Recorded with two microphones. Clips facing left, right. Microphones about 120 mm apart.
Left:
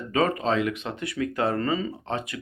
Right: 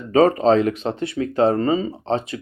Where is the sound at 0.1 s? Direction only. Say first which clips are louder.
Right 9 dB; 35° right (ahead or behind).